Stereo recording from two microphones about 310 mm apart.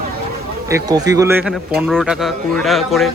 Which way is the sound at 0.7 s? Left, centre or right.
Centre.